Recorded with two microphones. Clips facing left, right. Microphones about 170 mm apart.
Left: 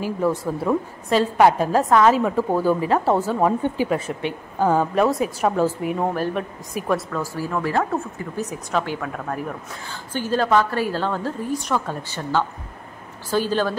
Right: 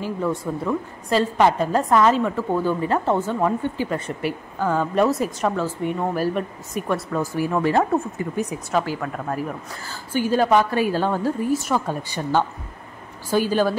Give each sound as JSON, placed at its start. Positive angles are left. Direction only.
{"t": 0.0, "sound": "a woman's voice", "side_deg": 5}
{"t": 4.9, "sound": "a woman's voice", "side_deg": 0}
{"t": 6.1, "sound": "a woman's voice", "side_deg": -5}
{"t": 7.1, "sound": "speech", "side_deg": -20}
{"t": 8.5, "sound": "a woman's voice", "side_deg": -5}